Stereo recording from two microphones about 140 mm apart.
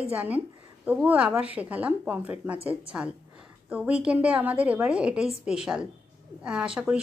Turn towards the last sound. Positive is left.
turn(degrees=-5)  # may be behind; listen again after turning